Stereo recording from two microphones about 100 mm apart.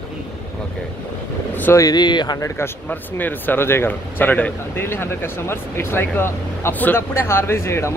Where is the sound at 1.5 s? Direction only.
20° left (ahead or behind).